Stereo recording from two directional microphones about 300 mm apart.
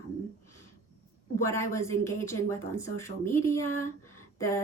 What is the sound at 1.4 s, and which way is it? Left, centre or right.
Speech, centre.